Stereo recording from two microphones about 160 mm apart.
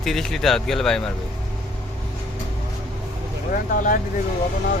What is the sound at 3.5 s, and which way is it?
Speech, 55° left (ahead or behind).